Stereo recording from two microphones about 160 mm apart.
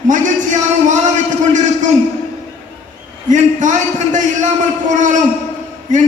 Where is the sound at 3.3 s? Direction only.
50° right (ahead or behind).